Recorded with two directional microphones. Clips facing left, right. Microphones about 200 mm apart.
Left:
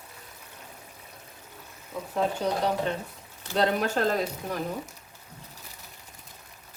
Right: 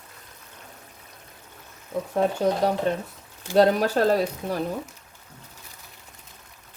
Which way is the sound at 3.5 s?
35° right (ahead or behind).